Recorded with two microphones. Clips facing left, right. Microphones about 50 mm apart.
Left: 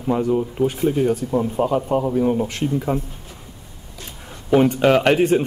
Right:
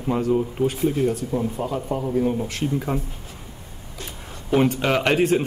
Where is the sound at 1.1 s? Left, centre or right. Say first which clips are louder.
Left 4 dB; left.